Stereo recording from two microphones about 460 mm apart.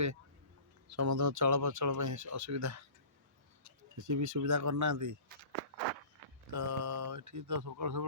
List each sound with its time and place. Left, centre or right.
0.9 s speech: right
3.9 s speech: right
6.5 s speech: right